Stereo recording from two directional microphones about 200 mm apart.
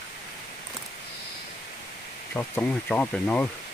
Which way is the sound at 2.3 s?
10° left (ahead or behind).